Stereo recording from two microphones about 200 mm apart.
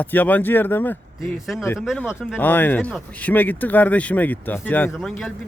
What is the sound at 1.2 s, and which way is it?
Speech, centre (ahead or behind).